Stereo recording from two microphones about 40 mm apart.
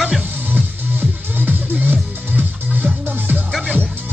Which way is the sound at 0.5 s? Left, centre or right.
Right.